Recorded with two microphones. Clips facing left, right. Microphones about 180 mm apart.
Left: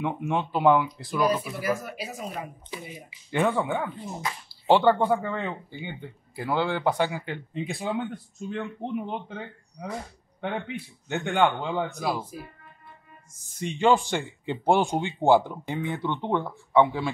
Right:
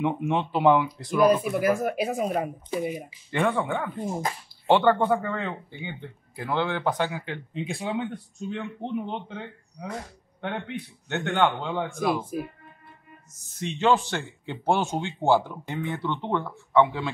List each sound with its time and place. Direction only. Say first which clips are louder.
0.0 s speech: right 2 dB; centre (ahead or behind)
1.5 s speech: right 6 dB; 50° right (ahead or behind)
3.3 s speech: left 1 dB; 10° left (ahead or behind)
3.9 s speech: right 5 dB; 50° right (ahead or behind)
4.6 s speech: even; 10° left (ahead or behind)
12.3 s speech: right 9 dB; 55° right (ahead or behind)
13.6 s speech: left 1 dB; 10° left (ahead or behind)